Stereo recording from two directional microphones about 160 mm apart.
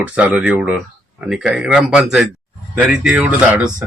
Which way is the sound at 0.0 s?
10° right (ahead or behind).